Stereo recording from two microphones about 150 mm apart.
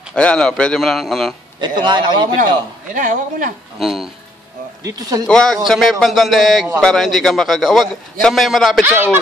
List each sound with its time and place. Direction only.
0.1 s a man's voice: 5° left (ahead or behind)
1.6 s speech: 30° right (ahead or behind)
2.9 s speech: 60° right (ahead or behind)
3.8 s a man's voice: centre (ahead or behind)
4.8 s speech: 25° right (ahead or behind)
5.2 s a man's voice: 5° left (ahead or behind)
8.8 s speech: 15° right (ahead or behind)